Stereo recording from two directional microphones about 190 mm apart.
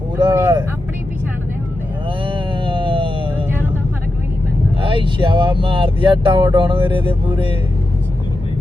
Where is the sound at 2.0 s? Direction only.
25° right (ahead or behind).